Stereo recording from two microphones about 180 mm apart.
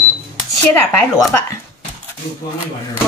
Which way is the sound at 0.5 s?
15° left (ahead or behind).